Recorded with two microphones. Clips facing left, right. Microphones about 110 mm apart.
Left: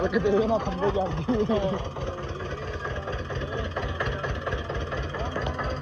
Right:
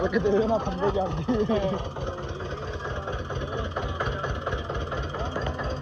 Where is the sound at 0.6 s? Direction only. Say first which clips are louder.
Even; 20° right (ahead or behind).